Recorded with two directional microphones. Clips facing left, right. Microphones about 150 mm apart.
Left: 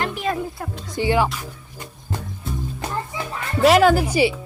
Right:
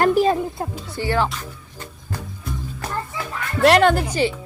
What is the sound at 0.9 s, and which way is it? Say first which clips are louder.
Speech: left 2 dB; 15° left (ahead or behind).